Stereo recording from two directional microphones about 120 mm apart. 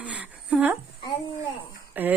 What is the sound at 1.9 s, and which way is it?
Speech, 15° right (ahead or behind).